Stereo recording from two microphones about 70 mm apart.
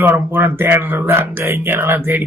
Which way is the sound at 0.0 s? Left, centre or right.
Right.